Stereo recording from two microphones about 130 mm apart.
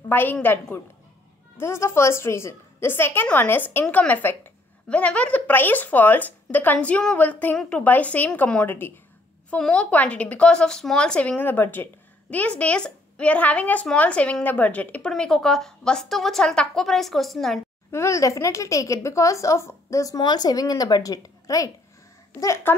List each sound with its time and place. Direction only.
0.1 s speech: 15° left (ahead or behind)
17.9 s speech: 25° left (ahead or behind)